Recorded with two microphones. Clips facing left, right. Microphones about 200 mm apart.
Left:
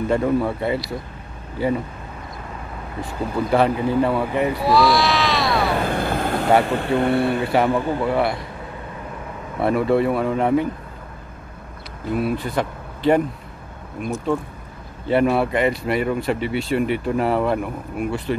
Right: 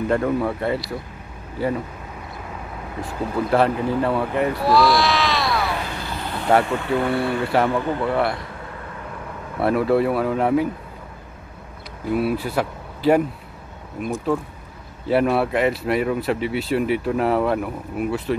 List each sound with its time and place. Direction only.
0.1 s speech: centre (ahead or behind)
3.0 s speech: centre (ahead or behind)
5.8 s vehicle: 55° left (ahead or behind)
6.7 s speech: 30° left (ahead or behind); by 8.4 s 5° left (ahead or behind)
9.6 s speech: centre (ahead or behind)
12.1 s speech: 5° right (ahead or behind)
15.0 s speech: centre (ahead or behind)